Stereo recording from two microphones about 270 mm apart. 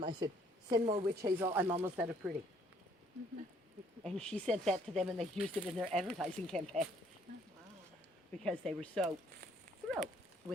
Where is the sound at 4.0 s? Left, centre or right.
Centre.